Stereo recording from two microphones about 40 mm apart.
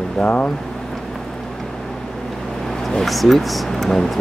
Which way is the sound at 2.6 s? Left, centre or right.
Centre.